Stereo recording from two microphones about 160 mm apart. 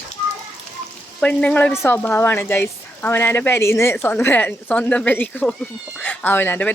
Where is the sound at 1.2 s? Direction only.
10° left (ahead or behind).